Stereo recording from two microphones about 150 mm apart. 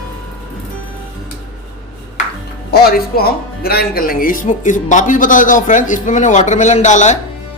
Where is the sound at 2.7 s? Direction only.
90° left.